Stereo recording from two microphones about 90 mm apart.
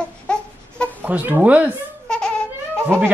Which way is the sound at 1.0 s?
20° right (ahead or behind).